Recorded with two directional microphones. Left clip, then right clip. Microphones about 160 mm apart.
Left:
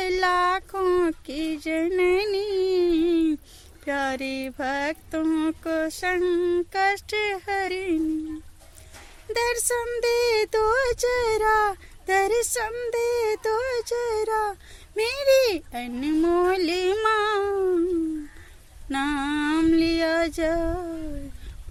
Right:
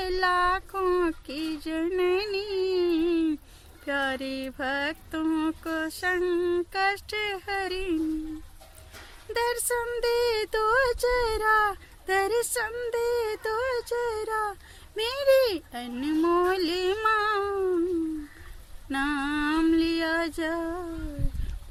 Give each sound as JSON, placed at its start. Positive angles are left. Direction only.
{"t": 0.0, "sound": "a sound", "side_deg": 40}
{"t": 3.8, "sound": "speech", "side_deg": 40}
{"t": 9.3, "sound": "speech", "side_deg": 40}
{"t": 18.9, "sound": "speech", "side_deg": 35}